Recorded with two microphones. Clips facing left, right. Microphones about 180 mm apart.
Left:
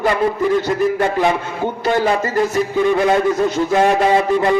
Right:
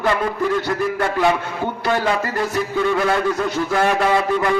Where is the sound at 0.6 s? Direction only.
20° left (ahead or behind).